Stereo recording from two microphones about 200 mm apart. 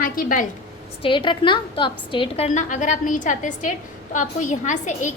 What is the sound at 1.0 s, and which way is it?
A woman's voice, 25° left (ahead or behind).